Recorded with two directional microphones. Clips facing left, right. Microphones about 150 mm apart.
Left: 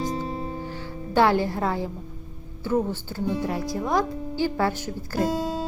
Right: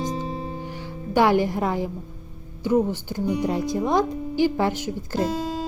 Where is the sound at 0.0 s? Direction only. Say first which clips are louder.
Even; centre (ahead or behind).